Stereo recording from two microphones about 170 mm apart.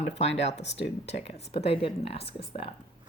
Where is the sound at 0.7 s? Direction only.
90° left.